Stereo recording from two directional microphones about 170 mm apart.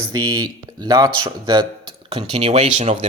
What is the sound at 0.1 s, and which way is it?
Speech, 25° right (ahead or behind).